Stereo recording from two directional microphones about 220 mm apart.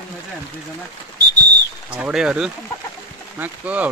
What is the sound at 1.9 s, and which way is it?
Speech, 5° right (ahead or behind).